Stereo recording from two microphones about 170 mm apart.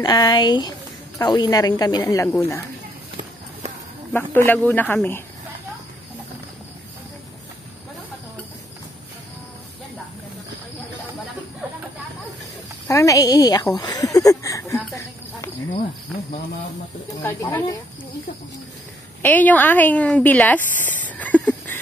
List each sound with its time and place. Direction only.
0.0 s a woman's voice: 25° left (ahead or behind)
4.1 s speech: 10° left (ahead or behind)
12.8 s a woman's voice: 20° left (ahead or behind)
13.7 s a sound: 20° left (ahead or behind)
17.2 s a woman's voice: 15° left (ahead or behind)
19.2 s speech: 10° left (ahead or behind)